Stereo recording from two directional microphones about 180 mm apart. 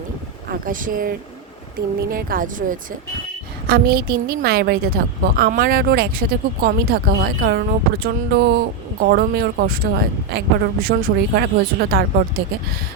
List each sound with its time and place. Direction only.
0.4 s speech: 50° right (ahead or behind)